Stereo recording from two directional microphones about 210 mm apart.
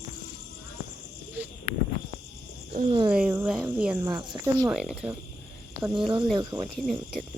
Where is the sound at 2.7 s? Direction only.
30° right (ahead or behind).